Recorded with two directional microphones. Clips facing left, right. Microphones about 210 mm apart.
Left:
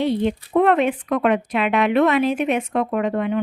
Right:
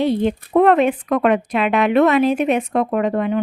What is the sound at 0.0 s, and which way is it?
Speech, 40° right (ahead or behind).